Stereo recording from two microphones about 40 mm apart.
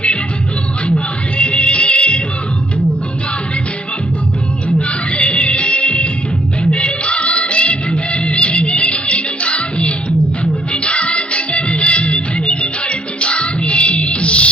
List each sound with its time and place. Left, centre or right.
0.9 s music: left
4.9 s music: left